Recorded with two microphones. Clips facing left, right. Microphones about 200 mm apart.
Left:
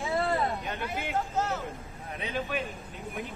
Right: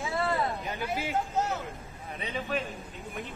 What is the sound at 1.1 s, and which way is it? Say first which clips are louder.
Speech: left 1 dB; 15° right (ahead or behind).